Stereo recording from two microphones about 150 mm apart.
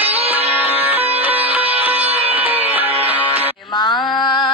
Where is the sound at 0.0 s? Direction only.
40° right (ahead or behind).